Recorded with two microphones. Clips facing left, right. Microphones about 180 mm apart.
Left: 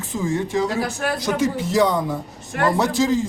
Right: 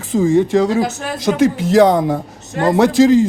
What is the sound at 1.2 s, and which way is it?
Speech, 90° right.